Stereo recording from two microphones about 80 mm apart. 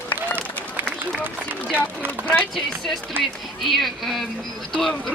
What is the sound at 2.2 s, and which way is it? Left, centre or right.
Speech, centre.